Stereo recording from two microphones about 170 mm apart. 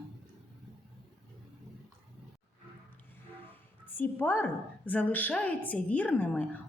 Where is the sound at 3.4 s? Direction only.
10° left (ahead or behind).